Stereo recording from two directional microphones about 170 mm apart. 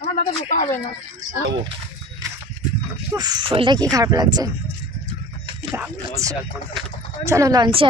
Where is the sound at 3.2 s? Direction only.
25° right (ahead or behind).